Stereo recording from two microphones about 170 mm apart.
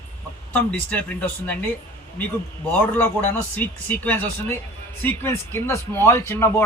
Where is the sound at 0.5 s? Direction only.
10° left (ahead or behind).